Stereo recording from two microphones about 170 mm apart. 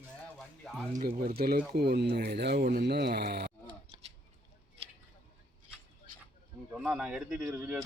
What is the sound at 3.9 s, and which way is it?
Scissors, 35° right (ahead or behind).